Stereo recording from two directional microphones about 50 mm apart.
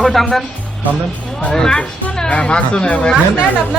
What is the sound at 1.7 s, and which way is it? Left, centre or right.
Speech, left.